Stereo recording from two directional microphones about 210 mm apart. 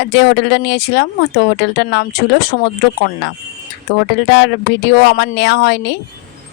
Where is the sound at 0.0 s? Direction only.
55° left (ahead or behind).